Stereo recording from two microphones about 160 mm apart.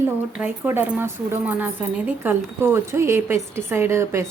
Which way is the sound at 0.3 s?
10° right (ahead or behind).